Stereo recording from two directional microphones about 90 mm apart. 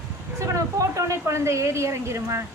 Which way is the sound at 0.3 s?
35° right (ahead or behind).